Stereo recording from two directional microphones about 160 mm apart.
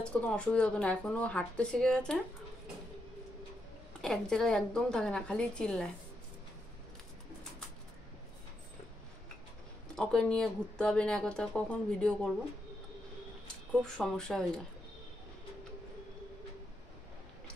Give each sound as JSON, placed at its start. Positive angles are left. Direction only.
{"t": 0.1, "sound": "speech", "side_deg": 5}
{"t": 4.0, "sound": "speech", "side_deg": 5}
{"t": 9.9, "sound": "speech", "side_deg": 5}
{"t": 13.8, "sound": "speech", "side_deg": 5}